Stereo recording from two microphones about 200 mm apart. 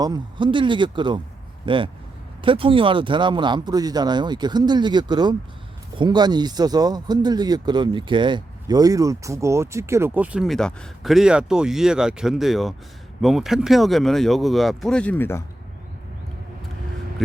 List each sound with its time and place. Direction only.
0.0 s speech: 20° right (ahead or behind); by 15.4 s 10° left (ahead or behind)
17.2 s speech: centre (ahead or behind)